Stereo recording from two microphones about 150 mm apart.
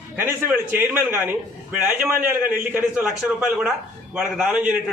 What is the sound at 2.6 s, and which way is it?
Speech, 15° right (ahead or behind).